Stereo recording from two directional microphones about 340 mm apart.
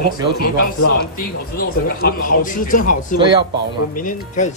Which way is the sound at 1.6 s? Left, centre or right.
Left.